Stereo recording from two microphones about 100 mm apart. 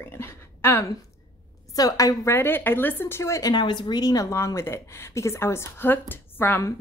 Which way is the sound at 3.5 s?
50° left (ahead or behind).